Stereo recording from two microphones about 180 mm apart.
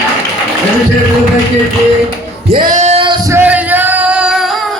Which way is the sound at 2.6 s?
40° right (ahead or behind).